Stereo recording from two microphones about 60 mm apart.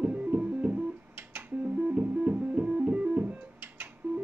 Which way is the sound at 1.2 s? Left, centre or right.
Right.